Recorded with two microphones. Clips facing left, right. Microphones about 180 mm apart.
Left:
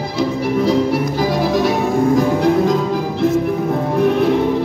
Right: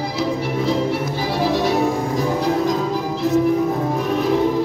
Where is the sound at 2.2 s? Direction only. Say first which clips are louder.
Left 5 dB; 55° left (ahead or behind).